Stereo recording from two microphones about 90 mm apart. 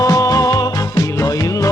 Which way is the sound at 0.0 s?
40° left (ahead or behind).